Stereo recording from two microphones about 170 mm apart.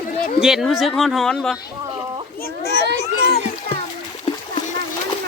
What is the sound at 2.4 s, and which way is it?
Children playing, 70° left (ahead or behind).